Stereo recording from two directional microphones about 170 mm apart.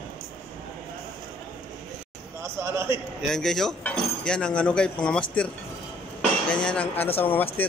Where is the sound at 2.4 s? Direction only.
15° right (ahead or behind).